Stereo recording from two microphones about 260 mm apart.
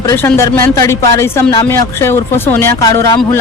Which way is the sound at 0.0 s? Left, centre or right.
Centre.